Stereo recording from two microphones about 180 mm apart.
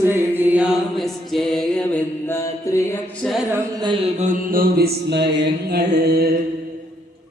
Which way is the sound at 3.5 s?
25° right (ahead or behind).